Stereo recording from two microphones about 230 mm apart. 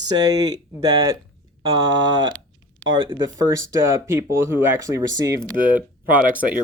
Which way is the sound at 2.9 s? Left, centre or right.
Right.